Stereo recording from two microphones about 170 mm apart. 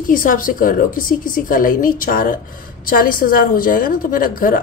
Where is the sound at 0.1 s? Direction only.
55° left (ahead or behind).